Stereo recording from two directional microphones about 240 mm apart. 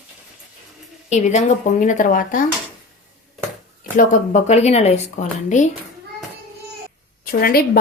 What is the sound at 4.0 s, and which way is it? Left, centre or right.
Speech, left.